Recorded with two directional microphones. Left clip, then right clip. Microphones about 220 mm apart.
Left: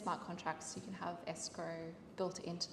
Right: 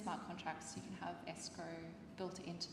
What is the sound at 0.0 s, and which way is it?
A woman's voice, 30° left (ahead or behind).